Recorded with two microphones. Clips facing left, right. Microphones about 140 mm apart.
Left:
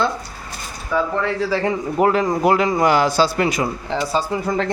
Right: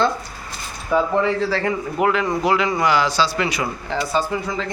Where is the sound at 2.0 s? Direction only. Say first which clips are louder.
Left 3 dB; 40° left (ahead or behind).